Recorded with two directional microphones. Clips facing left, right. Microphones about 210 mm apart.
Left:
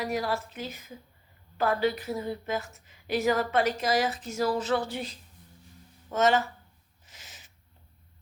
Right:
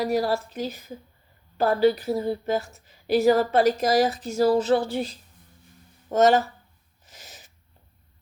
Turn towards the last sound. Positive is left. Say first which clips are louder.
# right 5 dB
turn(degrees=-40)  # may be behind; listen again after turning